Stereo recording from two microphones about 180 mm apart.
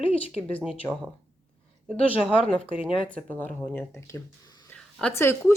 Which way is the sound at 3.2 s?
10° left (ahead or behind).